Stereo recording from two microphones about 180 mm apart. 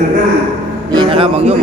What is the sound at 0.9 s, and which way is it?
Speech, 25° right (ahead or behind).